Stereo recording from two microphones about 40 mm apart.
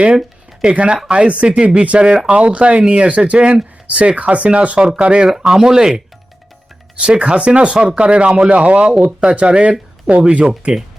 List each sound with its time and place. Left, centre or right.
0.6 s speech: right
5.3 s speech: centre
7.0 s speech: right
8.9 s speech: centre
9.2 s speech: right